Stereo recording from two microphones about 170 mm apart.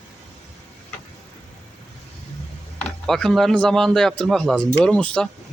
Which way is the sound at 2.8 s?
5° left (ahead or behind).